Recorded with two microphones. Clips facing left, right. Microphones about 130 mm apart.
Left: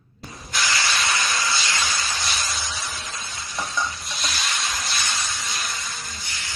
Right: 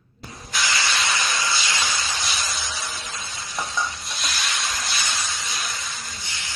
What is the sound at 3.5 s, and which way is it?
Stir, 25° right (ahead or behind).